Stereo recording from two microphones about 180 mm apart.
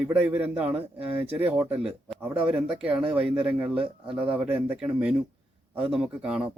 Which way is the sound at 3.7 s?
30° right (ahead or behind).